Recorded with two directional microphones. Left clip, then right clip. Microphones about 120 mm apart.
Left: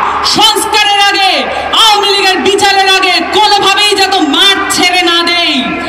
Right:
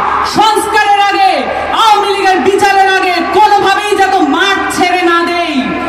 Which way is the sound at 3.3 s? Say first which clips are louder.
Even; 20° left (ahead or behind).